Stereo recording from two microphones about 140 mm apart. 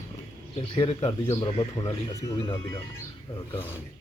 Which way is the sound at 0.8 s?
45° left (ahead or behind).